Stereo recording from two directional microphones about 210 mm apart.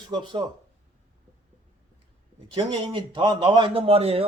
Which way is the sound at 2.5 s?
20° right (ahead or behind).